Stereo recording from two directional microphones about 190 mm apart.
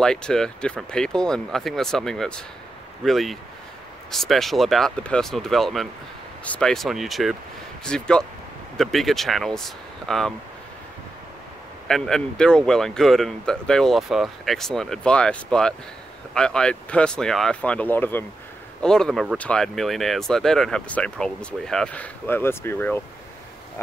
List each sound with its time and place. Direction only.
0.0 s speech: 5° left (ahead or behind)
11.9 s speech: 5° left (ahead or behind)